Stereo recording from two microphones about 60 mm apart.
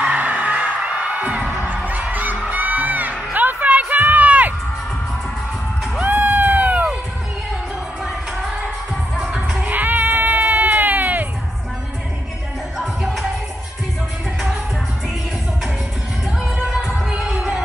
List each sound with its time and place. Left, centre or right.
0.0 s music: right
5.9 s crowd: right
9.6 s a sound: right
12.7 s music: centre
16.6 s music: centre
16.9 s music: right